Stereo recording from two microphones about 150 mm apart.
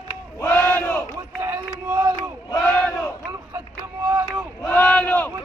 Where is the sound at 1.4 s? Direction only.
15° right (ahead or behind).